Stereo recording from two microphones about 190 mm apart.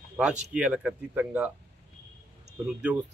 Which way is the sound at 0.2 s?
5° right (ahead or behind).